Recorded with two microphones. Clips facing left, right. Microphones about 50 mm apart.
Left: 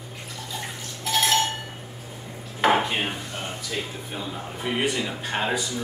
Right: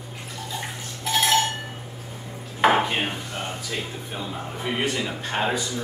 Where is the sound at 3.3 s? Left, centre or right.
Centre.